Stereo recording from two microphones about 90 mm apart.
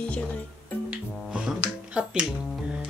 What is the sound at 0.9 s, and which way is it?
Music, 10° right (ahead or behind).